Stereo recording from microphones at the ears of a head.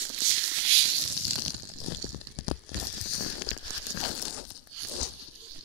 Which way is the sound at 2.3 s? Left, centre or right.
Left.